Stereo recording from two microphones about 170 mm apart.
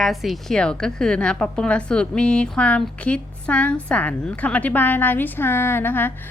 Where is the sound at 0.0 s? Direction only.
Centre (ahead or behind).